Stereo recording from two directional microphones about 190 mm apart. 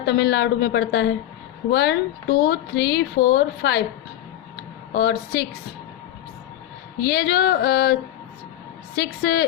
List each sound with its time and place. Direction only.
0.0 s speech: 60° left (ahead or behind)
4.9 s speech: 60° left (ahead or behind)
7.0 s speech: 60° left (ahead or behind)
9.0 s speech: 55° left (ahead or behind)